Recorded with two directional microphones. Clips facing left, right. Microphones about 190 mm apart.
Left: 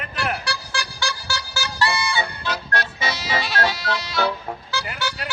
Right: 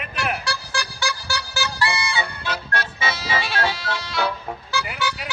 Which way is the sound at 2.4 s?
40° left (ahead or behind).